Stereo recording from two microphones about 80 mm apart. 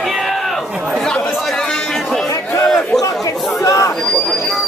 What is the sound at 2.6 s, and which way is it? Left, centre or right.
Chatter, centre.